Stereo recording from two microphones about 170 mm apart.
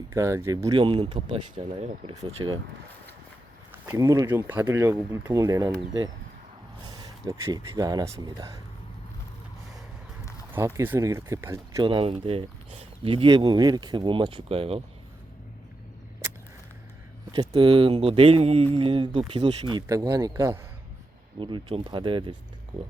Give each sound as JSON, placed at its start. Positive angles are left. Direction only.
{"t": 0.1, "sound": "speech", "side_deg": -15}
{"t": 3.7, "sound": "speech", "side_deg": -15}
{"t": 10.8, "sound": "speech", "side_deg": -15}
{"t": 11.8, "sound": "speech", "side_deg": -30}
{"t": 17.3, "sound": "speech", "side_deg": -25}